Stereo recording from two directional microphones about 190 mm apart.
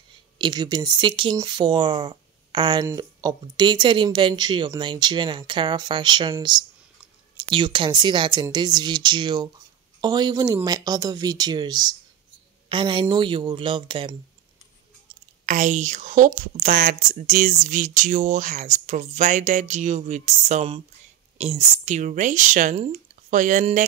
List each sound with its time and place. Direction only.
0.4 s a woman's voice: 20° right (ahead or behind)
15.4 s speech: 40° right (ahead or behind)